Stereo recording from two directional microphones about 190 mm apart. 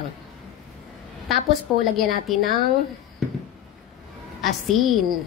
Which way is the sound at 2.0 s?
Centre (ahead or behind).